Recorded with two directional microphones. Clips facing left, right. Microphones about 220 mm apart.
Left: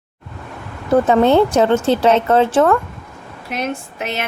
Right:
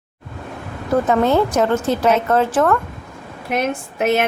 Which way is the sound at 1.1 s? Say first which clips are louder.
Left 3 dB; 30° left (ahead or behind).